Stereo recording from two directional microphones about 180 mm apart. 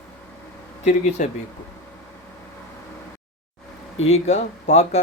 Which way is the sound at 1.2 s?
45° left (ahead or behind).